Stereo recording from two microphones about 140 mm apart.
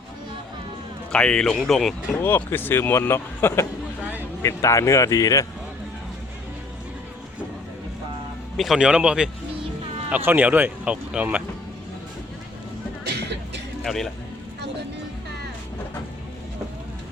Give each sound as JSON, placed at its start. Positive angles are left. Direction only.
{"t": 1.1, "sound": "speech", "side_deg": 5}
{"t": 2.2, "sound": "speech", "side_deg": 15}
{"t": 4.0, "sound": "a sound", "side_deg": -10}
{"t": 4.4, "sound": "speech", "side_deg": 20}
{"t": 8.5, "sound": "speech", "side_deg": 0}
{"t": 13.8, "sound": "speech", "side_deg": 0}